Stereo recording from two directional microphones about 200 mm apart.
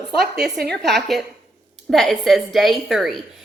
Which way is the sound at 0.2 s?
55° right (ahead or behind).